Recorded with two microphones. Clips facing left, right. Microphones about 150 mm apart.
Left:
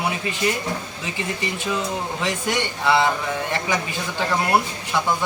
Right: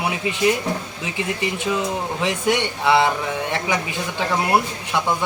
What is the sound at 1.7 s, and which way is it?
Speech, 15° right (ahead or behind).